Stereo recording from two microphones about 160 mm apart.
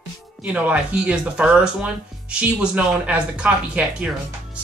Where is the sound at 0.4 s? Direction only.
10° right (ahead or behind).